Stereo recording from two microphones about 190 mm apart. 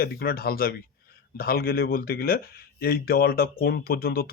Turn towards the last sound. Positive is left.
turn(degrees=55)  # may be behind; listen again after turning